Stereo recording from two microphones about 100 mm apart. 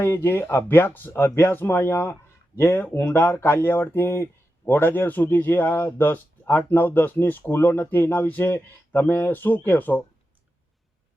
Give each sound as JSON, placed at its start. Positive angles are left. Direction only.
{"t": 0.0, "sound": "speech", "side_deg": 20}